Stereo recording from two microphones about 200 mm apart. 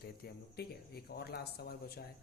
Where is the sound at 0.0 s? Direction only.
50° left (ahead or behind).